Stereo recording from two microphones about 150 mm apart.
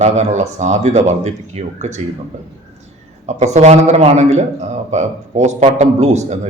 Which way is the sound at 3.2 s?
50° right (ahead or behind).